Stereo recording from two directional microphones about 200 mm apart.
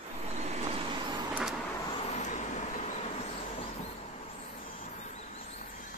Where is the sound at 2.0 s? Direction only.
35° left (ahead or behind).